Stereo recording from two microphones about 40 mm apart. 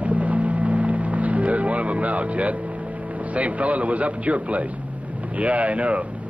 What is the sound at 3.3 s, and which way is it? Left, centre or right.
Speech, right.